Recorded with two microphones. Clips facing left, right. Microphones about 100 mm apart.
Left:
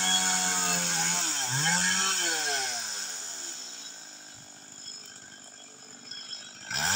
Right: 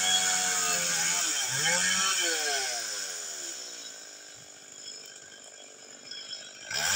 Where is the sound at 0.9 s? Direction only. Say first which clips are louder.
Left 3 dB; 20° left (ahead or behind).